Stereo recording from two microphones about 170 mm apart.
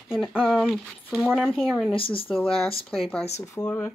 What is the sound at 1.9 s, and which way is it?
Speech, 30° left (ahead or behind).